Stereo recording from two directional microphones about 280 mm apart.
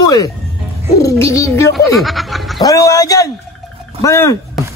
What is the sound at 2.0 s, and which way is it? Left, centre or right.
Speech, centre.